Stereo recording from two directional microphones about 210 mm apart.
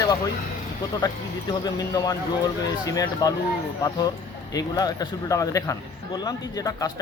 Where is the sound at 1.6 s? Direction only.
15° left (ahead or behind).